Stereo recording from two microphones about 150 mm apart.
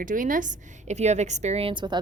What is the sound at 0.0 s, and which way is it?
A woman's voice, 60° right (ahead or behind).